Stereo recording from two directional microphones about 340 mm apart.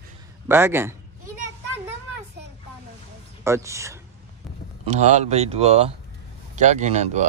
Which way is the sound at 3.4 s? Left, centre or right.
Centre.